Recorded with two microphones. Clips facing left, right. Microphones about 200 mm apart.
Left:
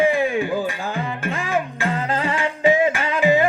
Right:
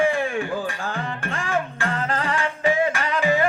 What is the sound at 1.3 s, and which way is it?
Music, 15° left (ahead or behind).